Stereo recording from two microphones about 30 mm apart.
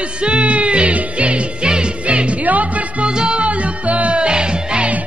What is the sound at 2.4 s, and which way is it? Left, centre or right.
Music, right.